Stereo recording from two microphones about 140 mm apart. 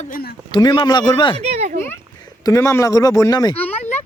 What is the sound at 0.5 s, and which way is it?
Speech, 30° left (ahead or behind).